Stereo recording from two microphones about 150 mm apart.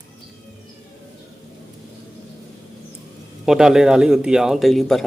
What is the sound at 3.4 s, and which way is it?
Speech, 5° right (ahead or behind).